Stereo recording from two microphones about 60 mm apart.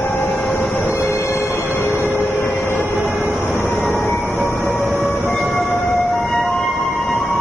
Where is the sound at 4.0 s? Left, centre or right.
Left.